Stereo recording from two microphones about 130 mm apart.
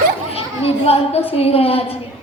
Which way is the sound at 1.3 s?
50° left (ahead or behind).